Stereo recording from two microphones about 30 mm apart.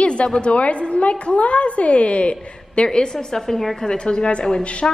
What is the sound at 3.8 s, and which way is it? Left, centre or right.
Speech, left.